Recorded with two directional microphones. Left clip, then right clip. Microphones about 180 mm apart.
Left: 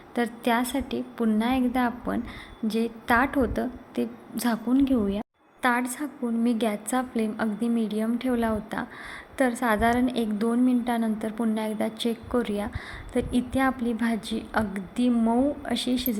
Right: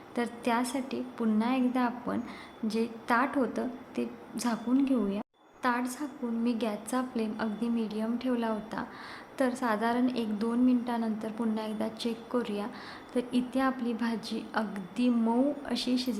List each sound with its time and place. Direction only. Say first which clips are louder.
0.2 s a woman's voice: left 5 dB; 20° left (ahead or behind)